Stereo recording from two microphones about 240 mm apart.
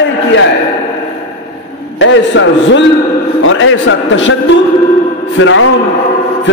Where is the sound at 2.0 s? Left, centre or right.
Left.